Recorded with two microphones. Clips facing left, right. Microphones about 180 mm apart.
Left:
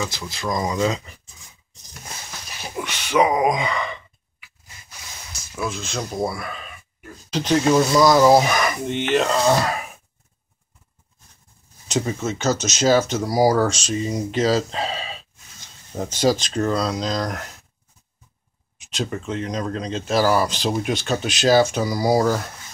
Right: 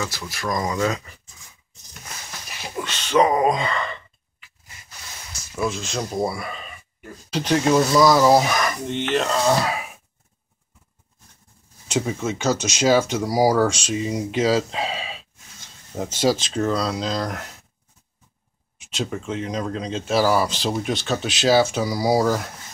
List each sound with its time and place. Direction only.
0.3 s speech: 20° left (ahead or behind)
2.8 s sigh: 10° left (ahead or behind)
5.6 s speech: centre (ahead or behind)
11.9 s speech: 10° right (ahead or behind)
18.9 s speech: 5° right (ahead or behind)